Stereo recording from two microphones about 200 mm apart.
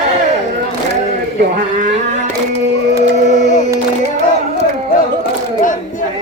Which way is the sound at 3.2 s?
35° left (ahead or behind).